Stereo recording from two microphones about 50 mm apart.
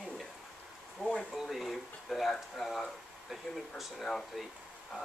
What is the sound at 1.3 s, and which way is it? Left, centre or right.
Speech, centre.